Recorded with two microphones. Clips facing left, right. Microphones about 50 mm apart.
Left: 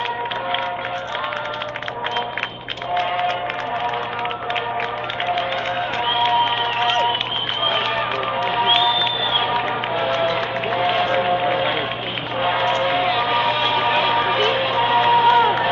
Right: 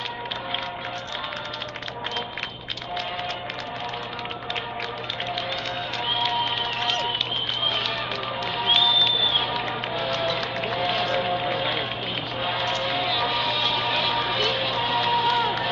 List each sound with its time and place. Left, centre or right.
2.9 s music: left
5.3 s crowd: left
7.6 s music: left